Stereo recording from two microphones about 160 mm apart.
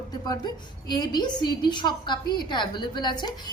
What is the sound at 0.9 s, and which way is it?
A woman's voice, 25° left (ahead or behind).